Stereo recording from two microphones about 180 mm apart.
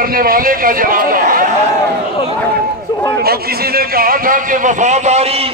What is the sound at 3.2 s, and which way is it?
A man's voice, 60° right (ahead or behind).